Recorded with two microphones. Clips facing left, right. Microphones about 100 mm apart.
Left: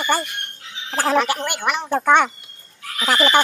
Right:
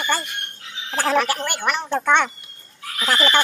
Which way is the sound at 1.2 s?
20° left (ahead or behind).